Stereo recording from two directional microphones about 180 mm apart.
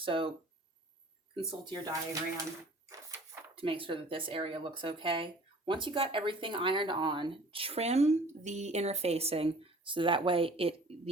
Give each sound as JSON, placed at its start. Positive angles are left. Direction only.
{"t": 0.0, "sound": "speech", "side_deg": -30}
{"t": 1.5, "sound": "speech", "side_deg": -25}
{"t": 3.5, "sound": "speech", "side_deg": -30}